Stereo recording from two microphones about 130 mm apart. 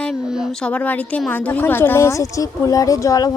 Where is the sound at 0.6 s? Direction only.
10° left (ahead or behind).